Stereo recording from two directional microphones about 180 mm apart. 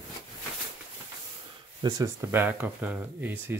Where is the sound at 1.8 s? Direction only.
15° right (ahead or behind).